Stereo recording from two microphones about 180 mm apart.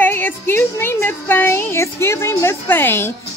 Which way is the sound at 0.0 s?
10° left (ahead or behind).